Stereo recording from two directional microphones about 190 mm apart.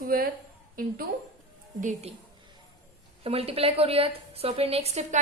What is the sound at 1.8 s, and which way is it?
Speech, 35° right (ahead or behind).